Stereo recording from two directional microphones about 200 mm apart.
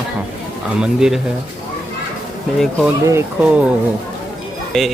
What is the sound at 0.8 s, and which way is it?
Speech, 5° right (ahead or behind).